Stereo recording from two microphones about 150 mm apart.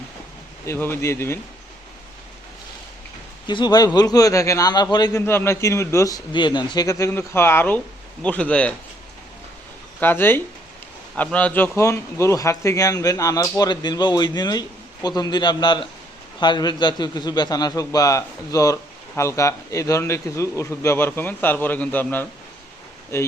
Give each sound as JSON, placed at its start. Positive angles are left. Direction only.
{"t": 0.6, "sound": "speech", "side_deg": 15}
{"t": 3.4, "sound": "a man's voice", "side_deg": 30}
{"t": 5.2, "sound": "a man's voice", "side_deg": 15}
{"t": 10.0, "sound": "a man's voice", "side_deg": 15}